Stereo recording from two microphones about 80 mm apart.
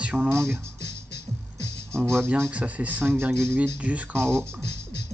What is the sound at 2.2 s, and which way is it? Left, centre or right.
Speech, right.